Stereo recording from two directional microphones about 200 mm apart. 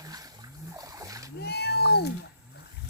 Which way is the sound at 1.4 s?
55° left (ahead or behind).